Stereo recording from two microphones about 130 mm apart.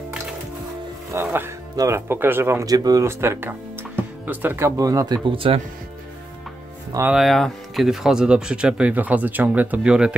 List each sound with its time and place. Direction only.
1.1 s speech: 15° right (ahead or behind); by 5.6 s 45° right (ahead or behind)
7.1 s speech: centre (ahead or behind)